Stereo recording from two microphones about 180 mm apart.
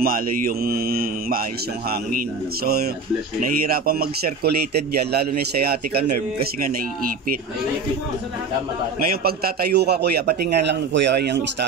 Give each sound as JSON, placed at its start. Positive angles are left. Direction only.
{"t": 0.0, "sound": "a man's voice", "side_deg": -55}
{"t": 9.0, "sound": "a man's voice", "side_deg": -55}